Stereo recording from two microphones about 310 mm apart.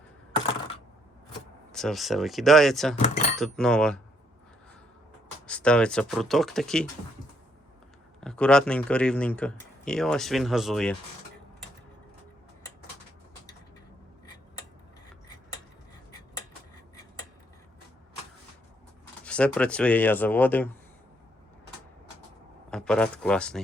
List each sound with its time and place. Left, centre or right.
1.7 s speech: centre
5.5 s speech: centre
8.2 s speech: centre
19.2 s speech: centre
22.7 s speech: centre